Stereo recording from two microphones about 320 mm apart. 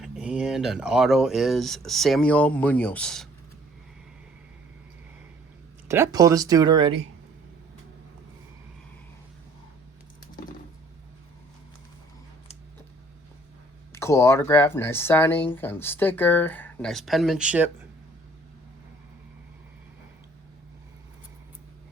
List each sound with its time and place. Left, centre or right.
0.0 s speech: centre
5.9 s speech: centre
13.9 s speech: centre